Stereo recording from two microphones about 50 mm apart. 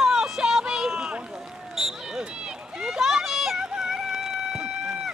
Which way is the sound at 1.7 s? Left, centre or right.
Centre.